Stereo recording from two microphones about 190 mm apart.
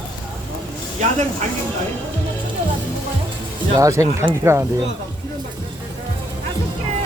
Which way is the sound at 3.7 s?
15° right (ahead or behind).